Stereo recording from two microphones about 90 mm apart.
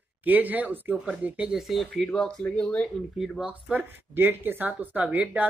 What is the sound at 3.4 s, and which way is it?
Speech, 15° right (ahead or behind).